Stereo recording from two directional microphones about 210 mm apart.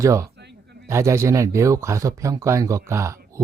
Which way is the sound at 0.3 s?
55° right (ahead or behind).